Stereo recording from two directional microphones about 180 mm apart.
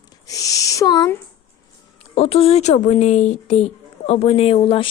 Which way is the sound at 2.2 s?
35° left (ahead or behind).